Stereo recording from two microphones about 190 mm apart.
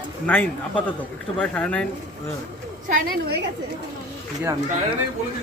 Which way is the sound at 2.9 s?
55° right (ahead or behind).